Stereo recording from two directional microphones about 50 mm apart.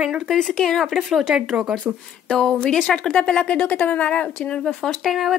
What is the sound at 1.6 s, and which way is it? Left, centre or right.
Speech, right.